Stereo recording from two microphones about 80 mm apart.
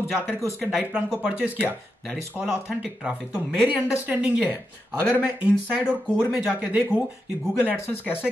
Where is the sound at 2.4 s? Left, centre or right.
Centre.